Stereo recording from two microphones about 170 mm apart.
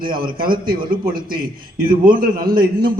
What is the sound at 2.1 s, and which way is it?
Speech, 60° right (ahead or behind).